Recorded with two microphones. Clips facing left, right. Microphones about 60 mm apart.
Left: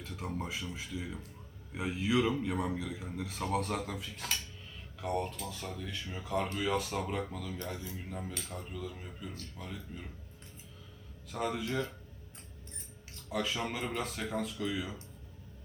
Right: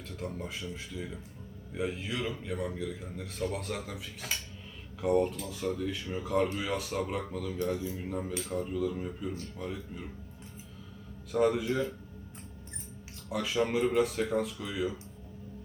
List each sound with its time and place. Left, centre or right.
0.3 s a man's voice: centre
11.3 s a man's voice: centre
13.3 s a man's voice: centre